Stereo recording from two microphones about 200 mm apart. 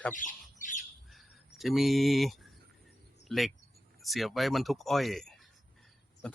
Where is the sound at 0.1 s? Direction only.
40° left (ahead or behind).